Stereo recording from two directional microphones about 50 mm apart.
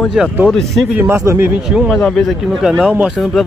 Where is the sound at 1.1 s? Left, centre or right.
Right.